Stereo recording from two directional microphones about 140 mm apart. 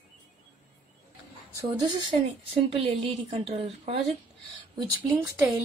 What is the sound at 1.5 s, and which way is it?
Speech, 30° right (ahead or behind).